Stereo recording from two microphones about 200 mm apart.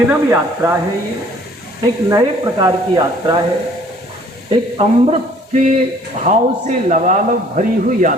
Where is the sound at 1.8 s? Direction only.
20° right (ahead or behind).